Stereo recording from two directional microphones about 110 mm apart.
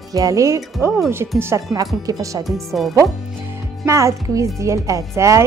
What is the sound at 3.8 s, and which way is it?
A woman's voice, 25° right (ahead or behind).